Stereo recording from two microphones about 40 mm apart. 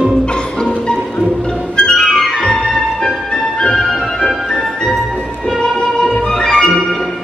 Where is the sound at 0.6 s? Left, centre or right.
Left.